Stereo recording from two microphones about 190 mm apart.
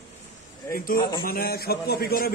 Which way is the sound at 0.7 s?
50° left (ahead or behind).